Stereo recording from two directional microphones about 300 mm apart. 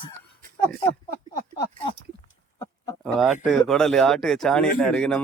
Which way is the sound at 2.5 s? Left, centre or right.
Centre.